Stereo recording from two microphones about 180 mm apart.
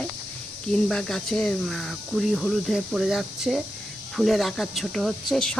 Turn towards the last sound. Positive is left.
turn(degrees=5)  # may be behind; listen again after turning